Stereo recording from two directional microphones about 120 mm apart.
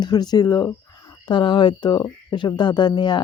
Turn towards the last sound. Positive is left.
turn(degrees=40)  # may be behind; listen again after turning